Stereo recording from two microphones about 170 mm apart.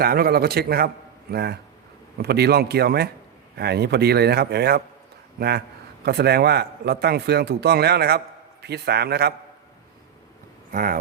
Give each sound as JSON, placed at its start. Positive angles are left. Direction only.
{"t": 0.0, "sound": "a man's voice", "side_deg": -65}
{"t": 10.7, "sound": "speech", "side_deg": -55}